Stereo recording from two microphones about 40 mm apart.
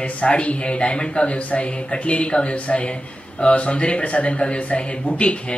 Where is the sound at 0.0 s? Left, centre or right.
Left.